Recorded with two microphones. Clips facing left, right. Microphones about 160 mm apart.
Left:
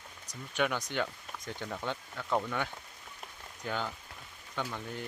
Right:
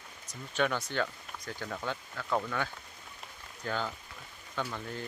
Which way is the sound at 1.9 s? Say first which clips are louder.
Even; 15° left (ahead or behind).